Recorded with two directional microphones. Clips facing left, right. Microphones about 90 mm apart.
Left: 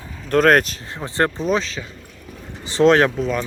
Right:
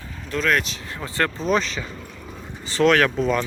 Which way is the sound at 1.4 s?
5° left (ahead or behind).